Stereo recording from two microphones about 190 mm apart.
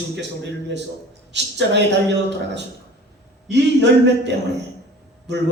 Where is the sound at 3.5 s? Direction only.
65° right (ahead or behind).